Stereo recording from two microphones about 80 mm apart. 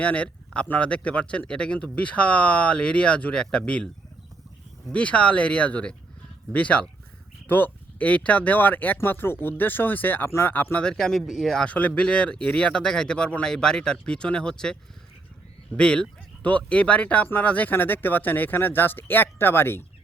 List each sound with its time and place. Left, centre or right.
0.0 s speech: centre
4.9 s speech: centre
10.8 s speech: centre
11.6 s speech: centre